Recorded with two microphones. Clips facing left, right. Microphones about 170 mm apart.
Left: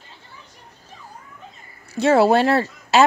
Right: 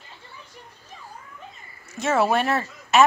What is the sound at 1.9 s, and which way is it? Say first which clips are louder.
Speech: left 6 dB; 35° left (ahead or behind).